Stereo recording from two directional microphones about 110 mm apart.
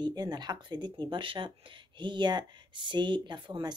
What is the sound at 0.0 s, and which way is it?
Speech, 40° right (ahead or behind).